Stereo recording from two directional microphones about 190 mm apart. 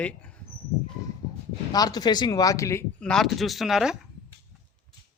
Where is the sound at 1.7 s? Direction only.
20° left (ahead or behind).